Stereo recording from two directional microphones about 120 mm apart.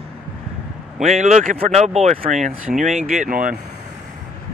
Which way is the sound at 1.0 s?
70° right (ahead or behind).